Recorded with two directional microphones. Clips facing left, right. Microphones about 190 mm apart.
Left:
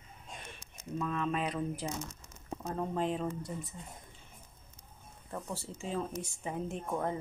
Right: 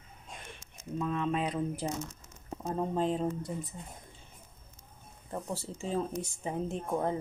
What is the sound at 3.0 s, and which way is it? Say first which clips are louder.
Speech: right 3 dB; 35° right (ahead or behind).